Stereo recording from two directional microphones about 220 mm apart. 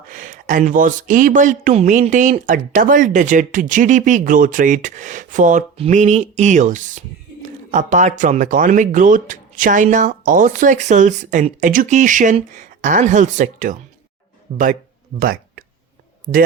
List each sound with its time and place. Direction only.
0.1 s speech: 35° right (ahead or behind)
14.5 s speech: 25° right (ahead or behind)
15.2 s a sound: 40° right (ahead or behind)
16.3 s speech: 35° right (ahead or behind)